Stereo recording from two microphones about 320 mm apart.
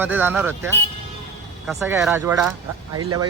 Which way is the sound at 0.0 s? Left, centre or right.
Centre.